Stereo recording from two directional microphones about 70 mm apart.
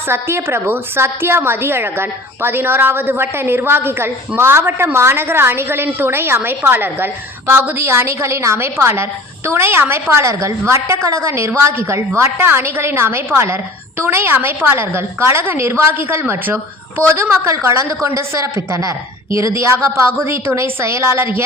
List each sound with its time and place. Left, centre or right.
0.1 s a woman's voice: right
10.1 s a woman's voice: right
17.4 s a woman's voice: right